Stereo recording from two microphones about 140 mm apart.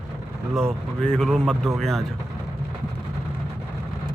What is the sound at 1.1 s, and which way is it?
Speech, 5° left (ahead or behind).